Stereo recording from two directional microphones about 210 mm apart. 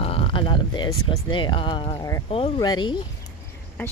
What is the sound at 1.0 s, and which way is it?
Speech, 25° left (ahead or behind).